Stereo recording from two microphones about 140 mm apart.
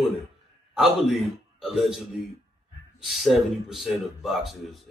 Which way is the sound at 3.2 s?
Centre (ahead or behind).